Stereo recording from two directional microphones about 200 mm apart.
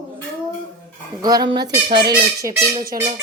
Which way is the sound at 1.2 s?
20° right (ahead or behind).